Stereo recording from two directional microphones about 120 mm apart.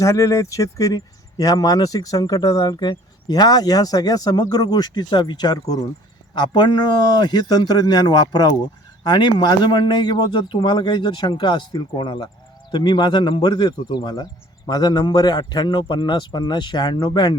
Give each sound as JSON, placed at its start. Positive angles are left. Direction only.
{"t": 0.0, "sound": "a man's voice", "side_deg": 25}